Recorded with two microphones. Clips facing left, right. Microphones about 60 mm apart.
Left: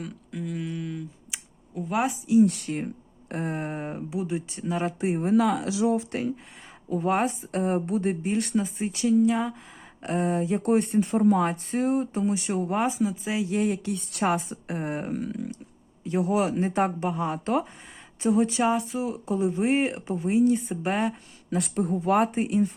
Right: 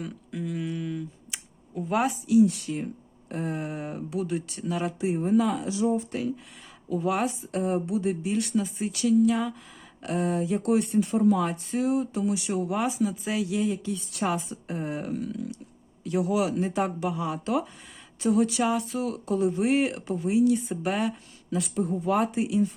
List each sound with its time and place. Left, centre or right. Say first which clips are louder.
0.0 s a sound: right 1 dB; centre
2.4 s speech: left 1 dB; left
3.9 s speech: right 3 dB; centre; by 5.0 s left
5.0 s speech: even; left
5.3 s speech: left 2 dB; left
6.9 s speech: left 2 dB; left
13.0 s speech: even; centre
13.5 s speech: left 2 dB; left
15.0 s speech: left 1 dB; left
18.2 s speech: left 1 dB; left
20.2 s speech: left 1 dB; left
21.5 s speech: left 1 dB; left